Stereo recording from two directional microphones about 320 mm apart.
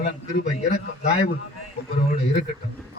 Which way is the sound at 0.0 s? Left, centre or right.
Left.